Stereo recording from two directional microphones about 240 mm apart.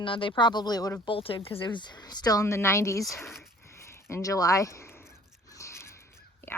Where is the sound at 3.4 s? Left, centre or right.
Centre.